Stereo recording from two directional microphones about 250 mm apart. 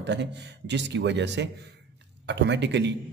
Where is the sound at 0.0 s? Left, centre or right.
Right.